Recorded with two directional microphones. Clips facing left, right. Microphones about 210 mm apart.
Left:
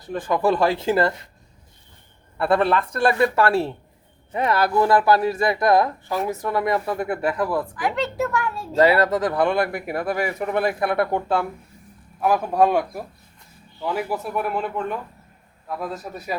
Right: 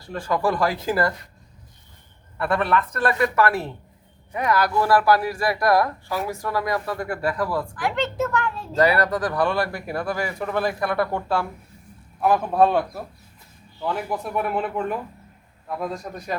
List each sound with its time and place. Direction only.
0.0 s speech: 20° left (ahead or behind)
2.4 s speech: 30° left (ahead or behind)
7.8 s a child's voice: 5° left (ahead or behind)
8.7 s speech: 25° left (ahead or behind)
12.2 s a child's voice: 10° left (ahead or behind)